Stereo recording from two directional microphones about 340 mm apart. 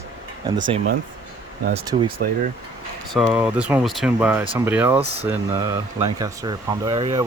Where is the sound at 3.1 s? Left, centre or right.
Centre.